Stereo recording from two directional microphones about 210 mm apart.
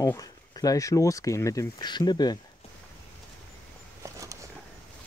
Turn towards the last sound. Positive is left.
turn(degrees=-15)  # may be behind; listen again after turning